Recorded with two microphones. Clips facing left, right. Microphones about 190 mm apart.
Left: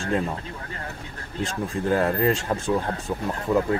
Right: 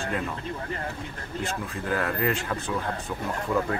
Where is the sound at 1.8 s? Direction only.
30° left (ahead or behind).